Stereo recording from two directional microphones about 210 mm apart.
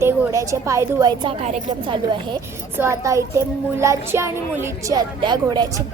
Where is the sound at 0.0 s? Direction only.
15° right (ahead or behind).